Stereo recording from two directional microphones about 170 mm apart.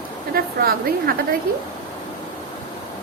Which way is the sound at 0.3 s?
60° right (ahead or behind).